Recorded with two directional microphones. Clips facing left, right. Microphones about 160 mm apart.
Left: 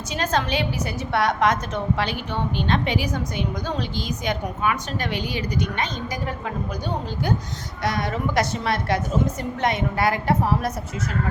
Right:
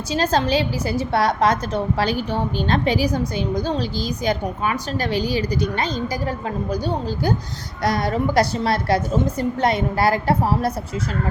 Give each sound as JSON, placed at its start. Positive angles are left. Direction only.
{"t": 0.1, "sound": "a woman's voice", "side_deg": -30}